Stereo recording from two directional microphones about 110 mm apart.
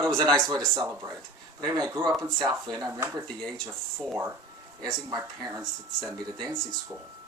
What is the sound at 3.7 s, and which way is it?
Speech, 20° right (ahead or behind).